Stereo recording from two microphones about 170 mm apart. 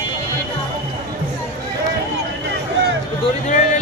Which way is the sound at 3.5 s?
45° left (ahead or behind).